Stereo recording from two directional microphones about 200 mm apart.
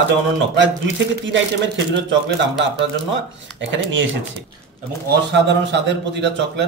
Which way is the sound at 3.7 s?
70° right (ahead or behind).